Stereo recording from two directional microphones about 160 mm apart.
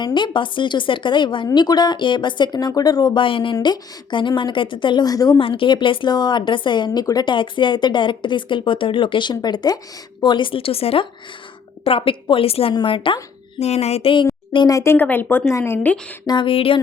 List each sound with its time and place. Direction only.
0.0 s speech: 30° left (ahead or behind)
5.4 s speech: 35° left (ahead or behind); by 16.0 s 15° left (ahead or behind)
16.2 s speech: 30° left (ahead or behind)